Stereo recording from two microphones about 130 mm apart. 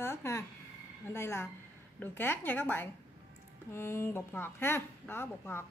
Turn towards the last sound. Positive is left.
turn(degrees=20)  # may be behind; listen again after turning